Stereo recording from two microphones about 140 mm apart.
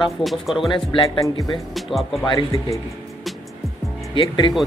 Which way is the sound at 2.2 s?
25° left (ahead or behind).